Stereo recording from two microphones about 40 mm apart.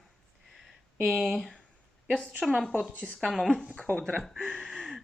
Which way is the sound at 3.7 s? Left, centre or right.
Left.